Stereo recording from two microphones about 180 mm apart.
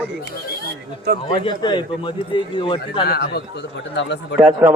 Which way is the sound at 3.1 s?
60° left (ahead or behind).